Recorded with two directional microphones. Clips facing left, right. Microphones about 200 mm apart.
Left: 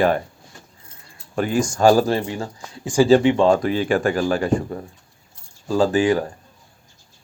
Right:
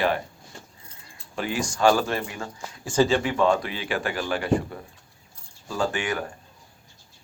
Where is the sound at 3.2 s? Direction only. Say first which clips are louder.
Left 7 dB; 25° left (ahead or behind).